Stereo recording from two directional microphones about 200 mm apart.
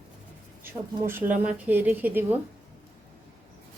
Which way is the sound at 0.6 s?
10° right (ahead or behind).